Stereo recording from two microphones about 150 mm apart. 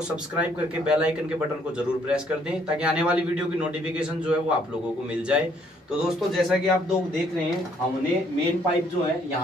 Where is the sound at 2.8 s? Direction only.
5° right (ahead or behind).